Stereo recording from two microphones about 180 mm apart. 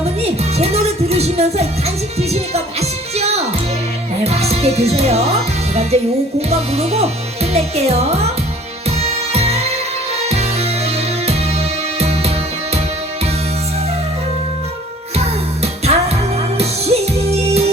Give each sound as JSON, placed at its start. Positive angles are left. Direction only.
{"t": 0.0, "sound": "music", "side_deg": -35}
{"t": 3.2, "sound": "music", "side_deg": -35}
{"t": 6.5, "sound": "speech", "side_deg": -35}
{"t": 9.0, "sound": "music", "side_deg": -35}
{"t": 11.9, "sound": "music", "side_deg": -35}
{"t": 15.6, "sound": "music", "side_deg": -35}